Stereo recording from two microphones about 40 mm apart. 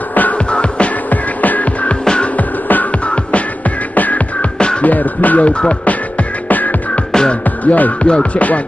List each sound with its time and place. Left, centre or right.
0.5 s music: left
1.1 s music: left
1.9 s music: left
2.3 s music: left
3.9 s music: left
4.4 s music: left
4.8 s music: left
5.5 s music: left
7.1 s music: centre
7.6 s music: left
8.0 s music: left